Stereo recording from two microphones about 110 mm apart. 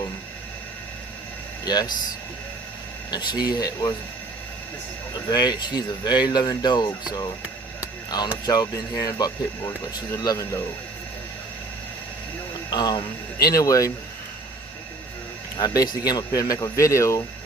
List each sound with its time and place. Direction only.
1.6 s speech: 40° left (ahead or behind)
3.1 s speech: 40° left (ahead or behind)
5.1 s speech: 40° left (ahead or behind)
8.4 s speech: 35° left (ahead or behind)
12.7 s speech: 40° left (ahead or behind)
15.5 s speech: 35° left (ahead or behind)